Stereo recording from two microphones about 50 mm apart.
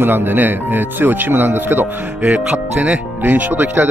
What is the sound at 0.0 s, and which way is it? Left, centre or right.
Speech, right.